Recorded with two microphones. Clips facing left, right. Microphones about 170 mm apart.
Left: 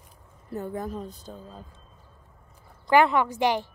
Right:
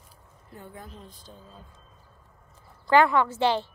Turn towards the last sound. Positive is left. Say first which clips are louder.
# even
turn(degrees=15)  # may be behind; listen again after turning